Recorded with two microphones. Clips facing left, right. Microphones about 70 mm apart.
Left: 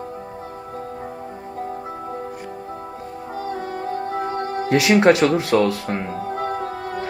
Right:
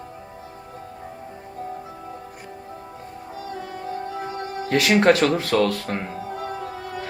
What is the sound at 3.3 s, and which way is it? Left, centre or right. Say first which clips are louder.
Music: left 6 dB; left.